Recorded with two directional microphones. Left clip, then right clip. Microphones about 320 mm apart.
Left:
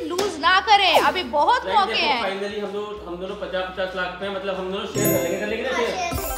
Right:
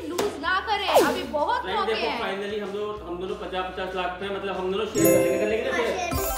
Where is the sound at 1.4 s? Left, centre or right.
Centre.